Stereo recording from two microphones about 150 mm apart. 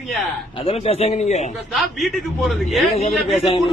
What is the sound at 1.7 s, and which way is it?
A man's voice, centre (ahead or behind).